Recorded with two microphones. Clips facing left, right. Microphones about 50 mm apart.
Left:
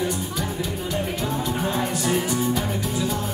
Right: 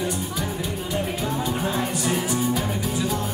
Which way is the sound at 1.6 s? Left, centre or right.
Centre.